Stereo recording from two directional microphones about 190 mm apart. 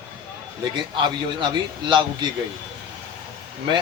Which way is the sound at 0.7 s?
25° right (ahead or behind).